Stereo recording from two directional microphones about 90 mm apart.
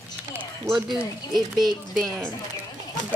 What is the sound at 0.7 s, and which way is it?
Speech, 5° right (ahead or behind).